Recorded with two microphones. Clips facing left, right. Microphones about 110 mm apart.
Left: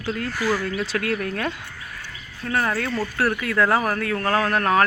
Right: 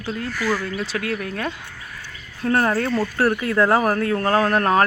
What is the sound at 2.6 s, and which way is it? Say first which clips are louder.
Speech: right 4 dB; 30° right (ahead or behind).